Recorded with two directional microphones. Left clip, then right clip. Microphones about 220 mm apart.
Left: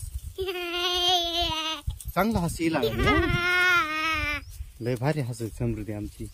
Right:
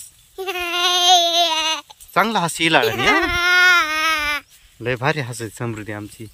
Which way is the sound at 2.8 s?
10° left (ahead or behind).